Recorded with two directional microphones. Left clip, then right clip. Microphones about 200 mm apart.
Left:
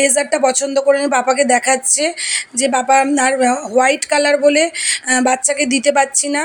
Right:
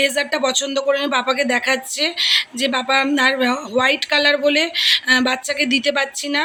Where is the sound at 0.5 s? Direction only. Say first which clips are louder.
Left 5 dB; centre (ahead or behind).